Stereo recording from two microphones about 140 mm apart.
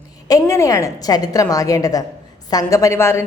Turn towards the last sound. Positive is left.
turn(degrees=20)  # may be behind; listen again after turning